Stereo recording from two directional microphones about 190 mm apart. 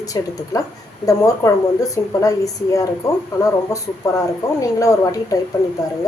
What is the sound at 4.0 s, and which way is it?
Speech, 15° left (ahead or behind).